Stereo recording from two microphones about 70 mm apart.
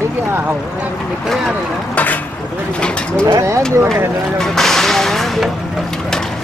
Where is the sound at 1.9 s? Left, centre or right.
Left.